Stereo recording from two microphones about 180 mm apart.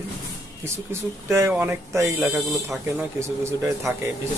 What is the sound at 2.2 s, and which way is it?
Speech, centre (ahead or behind).